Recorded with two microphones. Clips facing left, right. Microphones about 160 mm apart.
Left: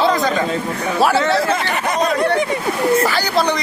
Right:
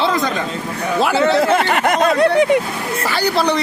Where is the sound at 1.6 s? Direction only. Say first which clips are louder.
Right 4 dB; 65° right (ahead or behind).